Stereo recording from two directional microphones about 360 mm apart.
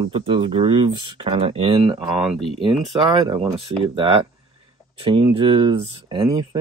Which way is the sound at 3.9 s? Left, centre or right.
Centre.